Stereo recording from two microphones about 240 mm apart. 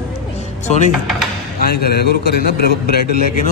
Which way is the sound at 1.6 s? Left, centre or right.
Left.